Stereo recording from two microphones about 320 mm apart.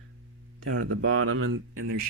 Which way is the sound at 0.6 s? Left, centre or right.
Right.